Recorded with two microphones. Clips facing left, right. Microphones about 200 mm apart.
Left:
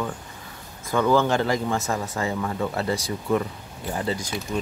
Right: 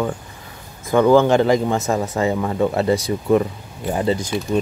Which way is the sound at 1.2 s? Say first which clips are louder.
Right 7 dB; 20° right (ahead or behind).